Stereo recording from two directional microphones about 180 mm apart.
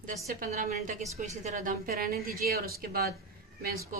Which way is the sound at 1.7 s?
55° right (ahead or behind).